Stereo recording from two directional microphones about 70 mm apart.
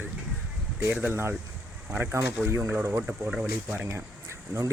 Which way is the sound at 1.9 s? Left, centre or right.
Right.